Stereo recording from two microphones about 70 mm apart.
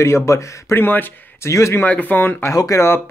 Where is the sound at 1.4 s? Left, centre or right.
Left.